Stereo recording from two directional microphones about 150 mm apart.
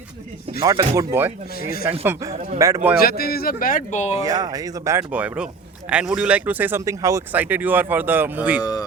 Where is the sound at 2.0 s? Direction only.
20° right (ahead or behind).